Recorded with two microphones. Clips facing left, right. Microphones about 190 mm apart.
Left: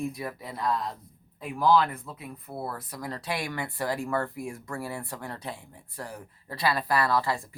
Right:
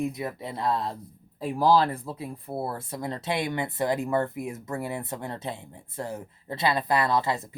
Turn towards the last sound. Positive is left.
turn(degrees=-20)  # may be behind; listen again after turning